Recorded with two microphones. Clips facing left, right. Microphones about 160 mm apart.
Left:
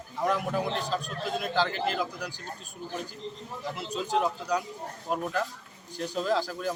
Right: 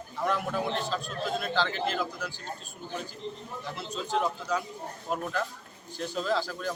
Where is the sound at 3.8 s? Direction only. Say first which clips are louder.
Left 2 dB; centre (ahead or behind).